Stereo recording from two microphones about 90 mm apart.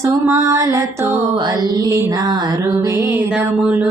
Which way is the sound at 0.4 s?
35° right (ahead or behind).